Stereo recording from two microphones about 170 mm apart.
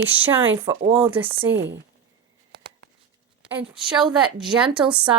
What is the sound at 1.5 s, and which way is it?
Speech, 90° right.